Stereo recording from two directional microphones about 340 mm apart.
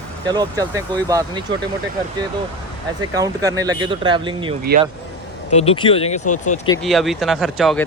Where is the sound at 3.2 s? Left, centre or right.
Centre.